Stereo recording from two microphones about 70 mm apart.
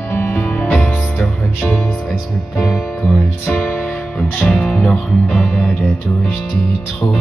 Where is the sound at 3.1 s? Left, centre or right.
Centre.